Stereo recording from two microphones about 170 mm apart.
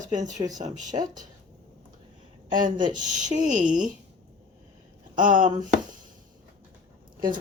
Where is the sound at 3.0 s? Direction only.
45° right (ahead or behind).